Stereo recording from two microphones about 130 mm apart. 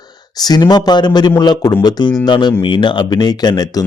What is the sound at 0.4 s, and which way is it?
A man's voice, 30° left (ahead or behind).